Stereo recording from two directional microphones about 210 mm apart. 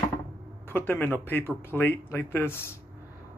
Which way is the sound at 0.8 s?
10° left (ahead or behind).